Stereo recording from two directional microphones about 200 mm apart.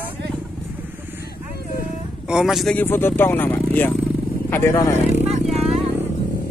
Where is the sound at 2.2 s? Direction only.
Centre (ahead or behind); by 4.9 s 15° left (ahead or behind).